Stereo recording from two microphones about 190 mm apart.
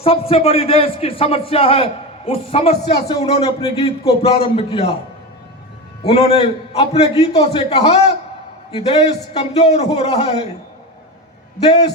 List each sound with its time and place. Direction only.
0.0 s a man's voice: 30° left (ahead or behind)
6.1 s a man's voice: 35° left (ahead or behind)